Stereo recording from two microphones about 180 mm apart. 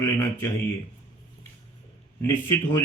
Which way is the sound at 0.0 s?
15° left (ahead or behind).